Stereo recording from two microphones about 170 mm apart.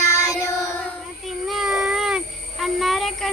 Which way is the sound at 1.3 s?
Centre (ahead or behind).